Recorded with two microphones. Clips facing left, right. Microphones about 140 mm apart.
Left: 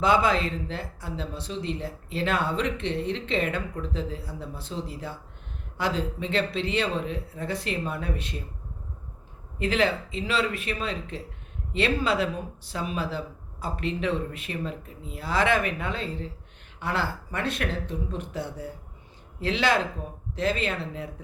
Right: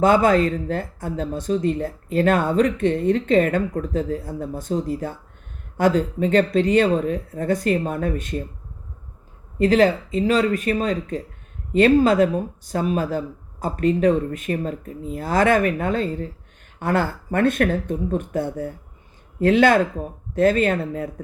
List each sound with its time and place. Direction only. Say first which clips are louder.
0.0 s speech: right 7 dB; 50° right (ahead or behind)
9.6 s speech: right 8 dB; 40° right (ahead or behind)